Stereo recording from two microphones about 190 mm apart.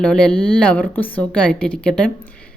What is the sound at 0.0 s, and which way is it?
Speech, 5° left (ahead or behind).